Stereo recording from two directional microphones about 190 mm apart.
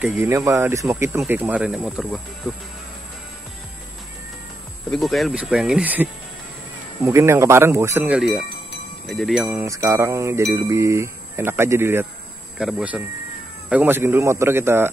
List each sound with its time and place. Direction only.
0.0 s music: 10° right (ahead or behind)
1.3 s speech: 10° right (ahead or behind)
4.9 s speech: centre (ahead or behind)
7.0 s music: 15° right (ahead or behind)
8.0 s speech: 5° right (ahead or behind)
9.6 s music: 15° right (ahead or behind)